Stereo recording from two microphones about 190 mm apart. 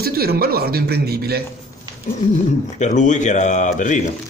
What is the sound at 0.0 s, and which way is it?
Speech, 55° right (ahead or behind).